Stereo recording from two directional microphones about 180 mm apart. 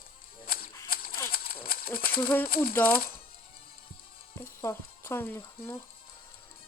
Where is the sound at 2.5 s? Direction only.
55° left (ahead or behind).